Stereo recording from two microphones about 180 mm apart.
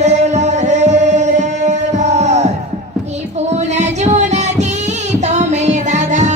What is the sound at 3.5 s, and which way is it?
Music, 40° right (ahead or behind).